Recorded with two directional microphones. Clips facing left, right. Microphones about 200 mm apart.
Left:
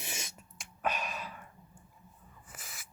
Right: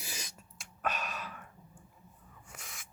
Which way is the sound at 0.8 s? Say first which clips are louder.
Left 2 dB; 10° left (ahead or behind).